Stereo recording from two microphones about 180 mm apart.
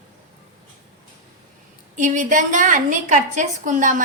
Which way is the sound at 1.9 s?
45° right (ahead or behind).